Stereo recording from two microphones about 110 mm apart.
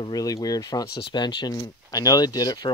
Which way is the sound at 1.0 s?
45° left (ahead or behind).